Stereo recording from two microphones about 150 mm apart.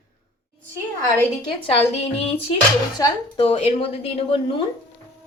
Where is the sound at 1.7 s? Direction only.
40° left (ahead or behind).